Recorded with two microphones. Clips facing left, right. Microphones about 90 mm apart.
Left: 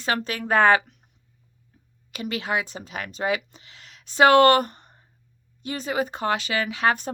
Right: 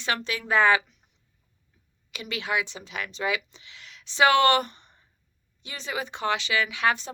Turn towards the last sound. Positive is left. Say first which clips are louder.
# left 3 dB
turn(degrees=45)  # may be behind; listen again after turning